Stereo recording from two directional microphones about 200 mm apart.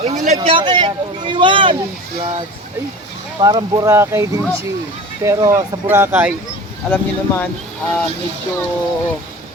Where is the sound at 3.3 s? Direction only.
20° right (ahead or behind).